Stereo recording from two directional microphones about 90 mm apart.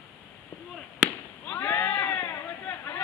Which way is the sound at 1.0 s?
15° left (ahead or behind).